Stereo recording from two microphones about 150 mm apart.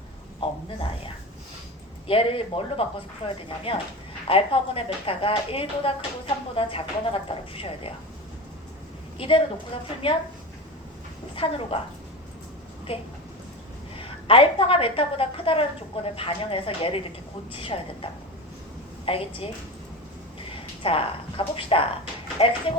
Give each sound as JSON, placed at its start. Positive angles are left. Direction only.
{"t": 0.3, "sound": "a sound", "side_deg": 35}
{"t": 2.0, "sound": "speech", "side_deg": 40}
{"t": 9.1, "sound": "a woman's voice", "side_deg": 40}
{"t": 11.3, "sound": "speech", "side_deg": 40}
{"t": 12.9, "sound": "a woman's voice", "side_deg": 35}
{"t": 20.5, "sound": "a woman's voice", "side_deg": 40}